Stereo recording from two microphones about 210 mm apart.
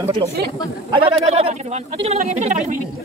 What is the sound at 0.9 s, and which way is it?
Speech, 30° right (ahead or behind).